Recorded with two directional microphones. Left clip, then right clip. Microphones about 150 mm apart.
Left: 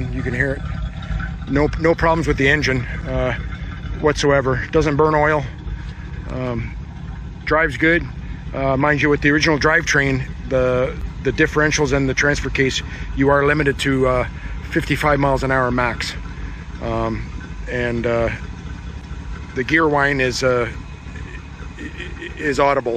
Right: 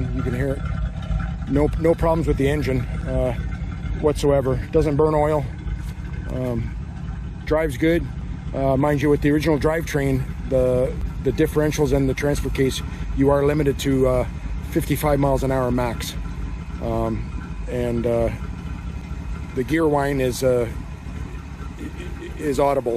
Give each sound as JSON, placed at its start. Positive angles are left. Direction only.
{"t": 0.0, "sound": "a sound", "side_deg": -5}
{"t": 1.5, "sound": "speech", "side_deg": -10}
{"t": 4.0, "sound": "speech", "side_deg": -5}
{"t": 19.5, "sound": "speech", "side_deg": -15}
{"t": 22.2, "sound": "speech", "side_deg": -15}